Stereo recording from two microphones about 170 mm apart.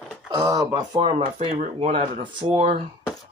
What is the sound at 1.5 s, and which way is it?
Speech, 45° right (ahead or behind).